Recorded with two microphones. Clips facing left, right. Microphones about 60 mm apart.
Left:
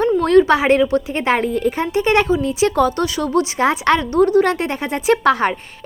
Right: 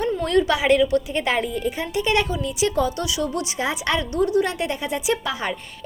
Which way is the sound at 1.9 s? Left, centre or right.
Left.